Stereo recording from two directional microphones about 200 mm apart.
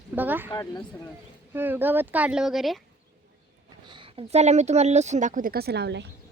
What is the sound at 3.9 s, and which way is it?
Speech, 25° right (ahead or behind).